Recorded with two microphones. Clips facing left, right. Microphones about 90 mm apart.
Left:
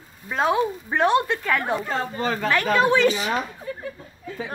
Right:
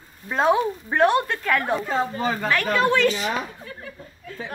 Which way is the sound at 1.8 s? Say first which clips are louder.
Right 2 dB; 15° right (ahead or behind).